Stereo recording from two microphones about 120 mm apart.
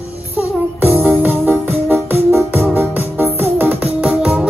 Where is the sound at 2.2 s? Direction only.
20° right (ahead or behind).